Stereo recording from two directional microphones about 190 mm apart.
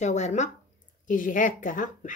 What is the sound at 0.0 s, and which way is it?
A woman's voice, 35° left (ahead or behind).